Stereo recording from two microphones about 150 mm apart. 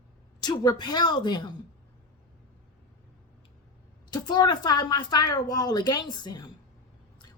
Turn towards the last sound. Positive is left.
turn(degrees=30)  # may be behind; listen again after turning